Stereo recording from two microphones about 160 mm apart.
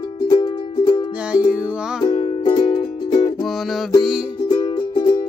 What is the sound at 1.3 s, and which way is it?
Music, 10° right (ahead or behind).